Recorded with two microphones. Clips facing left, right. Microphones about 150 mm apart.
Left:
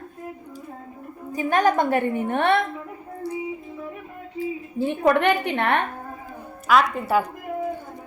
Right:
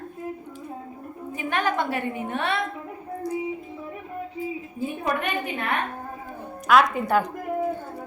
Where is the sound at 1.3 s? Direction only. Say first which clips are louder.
Left 6 dB; 40° left (ahead or behind); by 2.6 s 55° left (ahead or behind).